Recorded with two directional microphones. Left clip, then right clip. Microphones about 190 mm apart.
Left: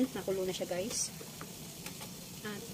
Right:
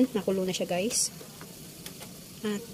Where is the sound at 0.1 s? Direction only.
35° right (ahead or behind).